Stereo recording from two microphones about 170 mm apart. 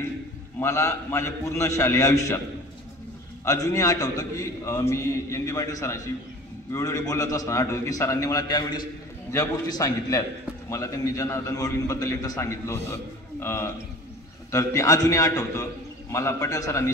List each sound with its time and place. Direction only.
0.6 s a man's voice: 15° left (ahead or behind)
3.4 s a man's voice: 20° left (ahead or behind)